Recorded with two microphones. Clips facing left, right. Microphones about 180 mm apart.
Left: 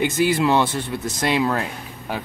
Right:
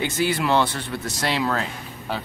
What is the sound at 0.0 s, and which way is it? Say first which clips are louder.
A man's voice: left 4 dB; 15° left (ahead or behind).